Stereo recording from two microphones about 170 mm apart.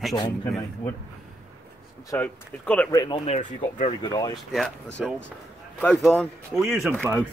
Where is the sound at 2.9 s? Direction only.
20° left (ahead or behind).